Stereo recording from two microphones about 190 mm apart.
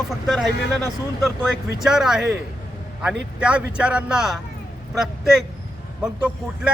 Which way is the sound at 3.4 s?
5° right (ahead or behind).